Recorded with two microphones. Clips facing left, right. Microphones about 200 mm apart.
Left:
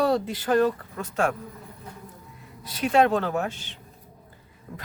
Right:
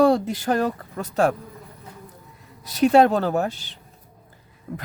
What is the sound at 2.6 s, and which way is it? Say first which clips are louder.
Speech: right 5 dB; 40° right (ahead or behind).